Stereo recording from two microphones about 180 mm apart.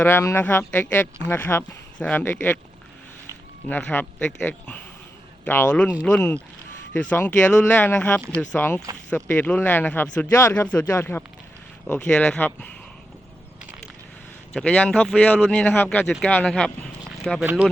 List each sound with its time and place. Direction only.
0.0 s speech: 15° left (ahead or behind)
3.7 s speech: 5° left (ahead or behind)
14.5 s speech: 5° left (ahead or behind)
17.4 s speech: 10° right (ahead or behind)